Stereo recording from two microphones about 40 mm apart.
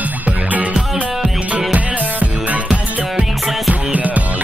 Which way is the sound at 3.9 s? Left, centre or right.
Right.